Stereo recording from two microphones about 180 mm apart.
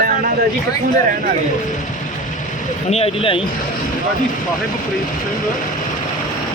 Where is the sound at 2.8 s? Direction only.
35° left (ahead or behind).